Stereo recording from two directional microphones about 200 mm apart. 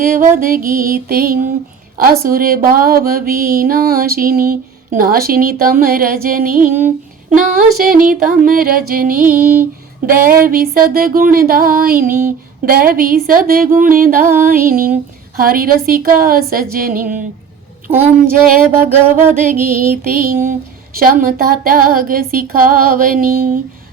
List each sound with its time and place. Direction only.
0.0 s speech: 40° right (ahead or behind)
12.0 s music: 10° right (ahead or behind)
12.6 s speech: 45° right (ahead or behind)
18.3 s speech: 45° right (ahead or behind)
18.7 s music: 10° right (ahead or behind)
19.6 s speech: 45° right (ahead or behind)